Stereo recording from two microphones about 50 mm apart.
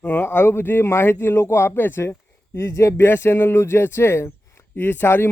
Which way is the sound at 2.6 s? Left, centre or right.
Left.